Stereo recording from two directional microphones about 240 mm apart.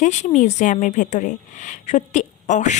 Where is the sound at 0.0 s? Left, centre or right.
Left.